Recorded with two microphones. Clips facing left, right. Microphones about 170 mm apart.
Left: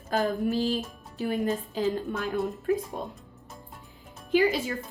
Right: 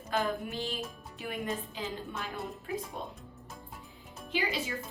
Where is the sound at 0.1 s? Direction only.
40° left (ahead or behind).